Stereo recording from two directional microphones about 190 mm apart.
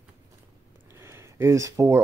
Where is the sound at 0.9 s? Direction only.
15° right (ahead or behind).